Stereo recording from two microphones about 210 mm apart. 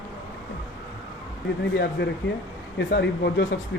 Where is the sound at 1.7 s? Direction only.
55° left (ahead or behind).